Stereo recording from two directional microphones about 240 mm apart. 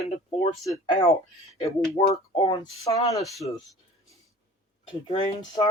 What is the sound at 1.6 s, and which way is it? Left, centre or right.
Speech, left.